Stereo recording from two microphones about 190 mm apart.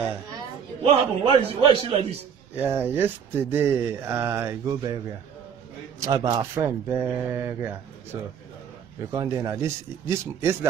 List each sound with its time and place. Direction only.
0.8 s a man's voice: 30° right (ahead or behind)
2.5 s speech: 10° right (ahead or behind)
6.0 s a man's voice: 20° right (ahead or behind)
6.5 s speech: 10° right (ahead or behind)